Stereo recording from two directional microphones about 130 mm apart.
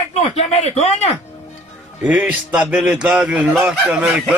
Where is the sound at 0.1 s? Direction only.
55° left (ahead or behind).